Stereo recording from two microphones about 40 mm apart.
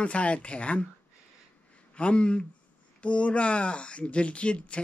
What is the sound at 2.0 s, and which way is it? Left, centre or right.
Speech, left.